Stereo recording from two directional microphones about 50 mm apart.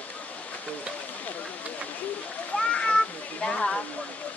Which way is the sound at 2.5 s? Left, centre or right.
Centre.